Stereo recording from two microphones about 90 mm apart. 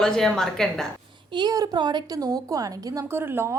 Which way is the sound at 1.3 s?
45° right (ahead or behind).